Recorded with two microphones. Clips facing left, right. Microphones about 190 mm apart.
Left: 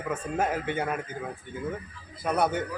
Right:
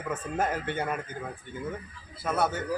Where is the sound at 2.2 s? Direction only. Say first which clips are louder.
Left 2 dB; 20° left (ahead or behind).